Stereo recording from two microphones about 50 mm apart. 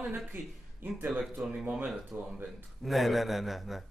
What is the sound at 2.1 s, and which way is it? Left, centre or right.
Speech, right.